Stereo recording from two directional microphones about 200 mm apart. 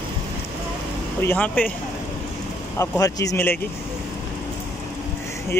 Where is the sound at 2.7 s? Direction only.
15° left (ahead or behind).